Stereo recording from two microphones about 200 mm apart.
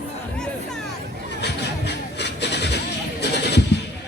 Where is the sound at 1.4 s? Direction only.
55° left (ahead or behind).